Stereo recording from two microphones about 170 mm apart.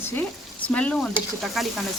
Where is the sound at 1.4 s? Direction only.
Centre (ahead or behind).